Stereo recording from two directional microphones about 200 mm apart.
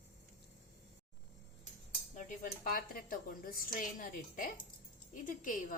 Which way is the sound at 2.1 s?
40° left (ahead or behind).